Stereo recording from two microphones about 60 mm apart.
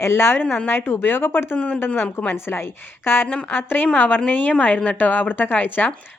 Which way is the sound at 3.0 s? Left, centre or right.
Left.